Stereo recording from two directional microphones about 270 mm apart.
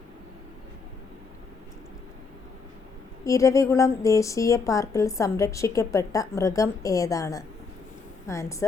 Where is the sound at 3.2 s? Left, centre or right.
Centre.